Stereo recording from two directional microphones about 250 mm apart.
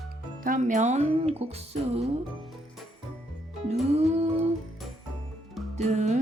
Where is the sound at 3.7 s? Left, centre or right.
Right.